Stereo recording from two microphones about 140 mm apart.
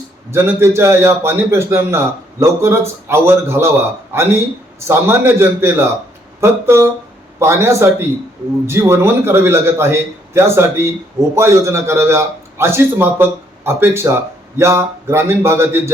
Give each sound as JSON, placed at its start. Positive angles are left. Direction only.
{"t": 0.3, "sound": "a man's voice", "side_deg": -20}